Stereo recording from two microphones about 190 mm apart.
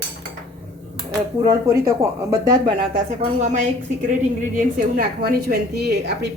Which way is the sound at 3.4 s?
40° right (ahead or behind).